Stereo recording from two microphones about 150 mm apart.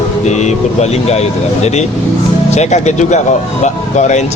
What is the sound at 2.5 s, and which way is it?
Speech, 50° left (ahead or behind).